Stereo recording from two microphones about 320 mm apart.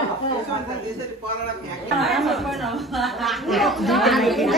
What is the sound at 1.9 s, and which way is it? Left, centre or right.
A woman's voice, centre.